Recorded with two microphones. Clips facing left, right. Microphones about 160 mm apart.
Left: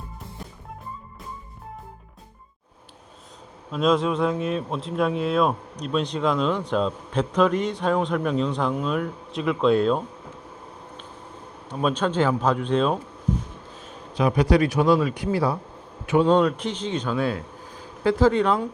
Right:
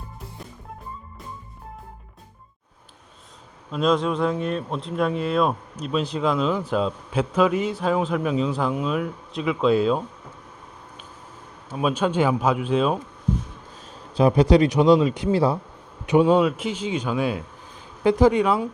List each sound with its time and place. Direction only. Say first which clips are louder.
3.7 s speech: even; centre (ahead or behind)
11.7 s speech: right 1 dB; 5° right (ahead or behind)
14.2 s a man's voice: right 3 dB; 30° right (ahead or behind)
16.0 s a man's voice: right 1 dB; 15° right (ahead or behind)